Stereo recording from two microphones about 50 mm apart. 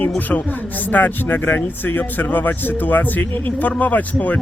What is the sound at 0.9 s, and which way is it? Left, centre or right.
Speech, left.